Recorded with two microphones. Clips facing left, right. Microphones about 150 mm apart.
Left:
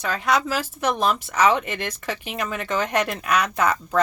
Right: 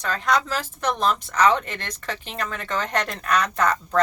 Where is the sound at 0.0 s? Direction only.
5° left (ahead or behind).